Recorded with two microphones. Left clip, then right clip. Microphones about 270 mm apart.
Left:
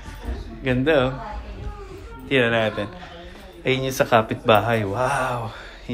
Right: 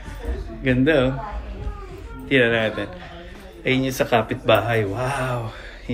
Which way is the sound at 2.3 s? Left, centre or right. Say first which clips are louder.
Right 1 dB; centre.